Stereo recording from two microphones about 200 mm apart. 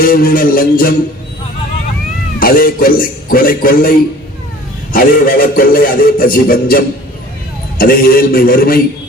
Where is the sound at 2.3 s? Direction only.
45° left (ahead or behind).